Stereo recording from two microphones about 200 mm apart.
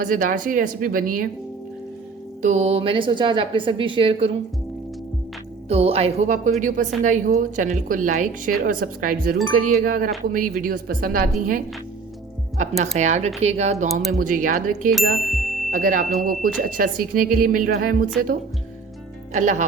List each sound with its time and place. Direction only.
0.0 s speech: 40° right (ahead or behind)
2.4 s a woman's voice: 35° right (ahead or behind)
5.6 s a woman's voice: 30° right (ahead or behind)
15.2 s music: centre (ahead or behind)
15.7 s speech: 40° right (ahead or behind)
19.3 s a woman's voice: 40° right (ahead or behind)